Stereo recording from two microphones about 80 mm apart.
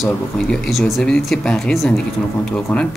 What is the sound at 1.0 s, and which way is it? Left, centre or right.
Speech, centre.